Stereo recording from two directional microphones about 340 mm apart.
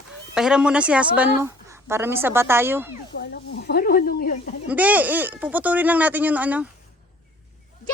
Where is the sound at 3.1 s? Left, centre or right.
Left.